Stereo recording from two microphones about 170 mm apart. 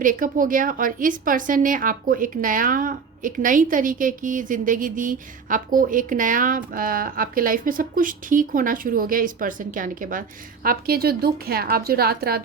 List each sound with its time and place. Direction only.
0.0 s a woman's voice: 50° right (ahead or behind)